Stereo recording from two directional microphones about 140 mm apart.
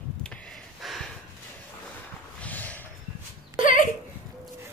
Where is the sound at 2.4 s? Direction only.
10° left (ahead or behind).